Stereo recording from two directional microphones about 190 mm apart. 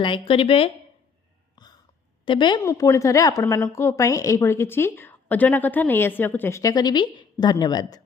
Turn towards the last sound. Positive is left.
turn(degrees=20)  # may be behind; listen again after turning